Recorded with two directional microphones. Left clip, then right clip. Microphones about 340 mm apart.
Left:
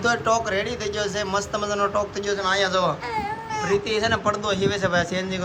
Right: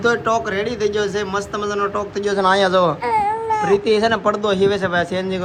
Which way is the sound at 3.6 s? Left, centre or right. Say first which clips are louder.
Right 6 dB; centre.